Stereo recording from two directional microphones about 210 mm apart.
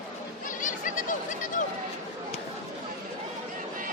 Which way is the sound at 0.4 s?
40° left (ahead or behind).